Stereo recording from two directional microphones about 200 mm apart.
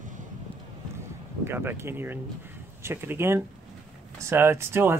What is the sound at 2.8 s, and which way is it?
Speech, 10° right (ahead or behind).